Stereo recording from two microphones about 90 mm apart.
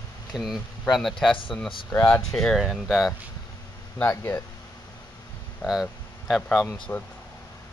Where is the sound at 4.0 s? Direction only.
25° left (ahead or behind).